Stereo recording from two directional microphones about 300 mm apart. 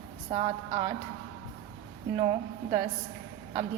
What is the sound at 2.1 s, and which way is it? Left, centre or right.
Speech, centre.